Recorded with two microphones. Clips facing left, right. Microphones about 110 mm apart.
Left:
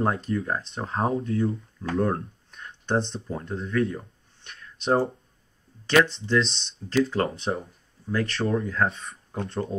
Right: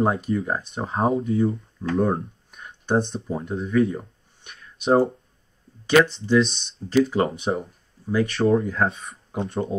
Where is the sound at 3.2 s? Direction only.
10° right (ahead or behind).